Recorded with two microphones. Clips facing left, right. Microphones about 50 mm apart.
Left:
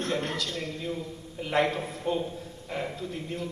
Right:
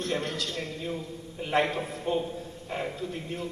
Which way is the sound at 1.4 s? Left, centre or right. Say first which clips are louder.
Even; right.